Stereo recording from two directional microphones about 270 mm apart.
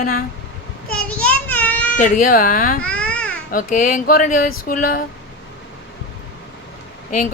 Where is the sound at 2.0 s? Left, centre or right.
Left.